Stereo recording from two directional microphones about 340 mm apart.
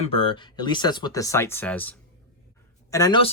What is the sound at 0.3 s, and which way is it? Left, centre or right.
Speech, centre.